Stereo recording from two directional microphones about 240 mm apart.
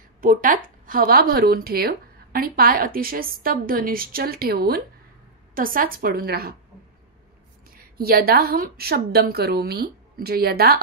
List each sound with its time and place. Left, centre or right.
0.2 s a woman's voice: right
7.7 s a woman's voice: right